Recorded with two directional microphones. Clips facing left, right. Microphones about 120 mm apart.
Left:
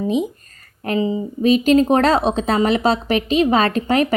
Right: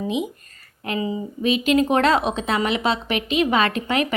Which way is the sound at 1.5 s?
40° left (ahead or behind).